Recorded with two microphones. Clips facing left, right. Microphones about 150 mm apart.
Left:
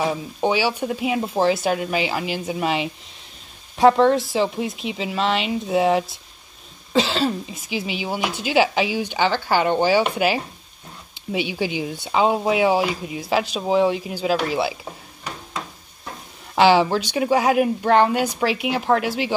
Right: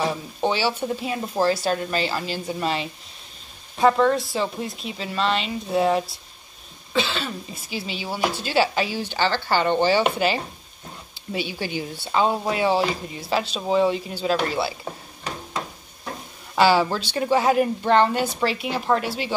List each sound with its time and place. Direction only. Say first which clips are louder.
0.0 s speech: left 2 dB; 10° left (ahead or behind)
6.9 s cough: left 6 dB; 35° left (ahead or behind)
7.5 s speech: left 4 dB; 15° left (ahead or behind)
16.5 s speech: left 3 dB; 15° left (ahead or behind)